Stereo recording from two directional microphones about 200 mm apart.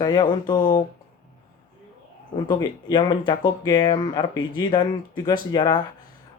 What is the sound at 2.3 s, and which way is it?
Speech, 20° left (ahead or behind).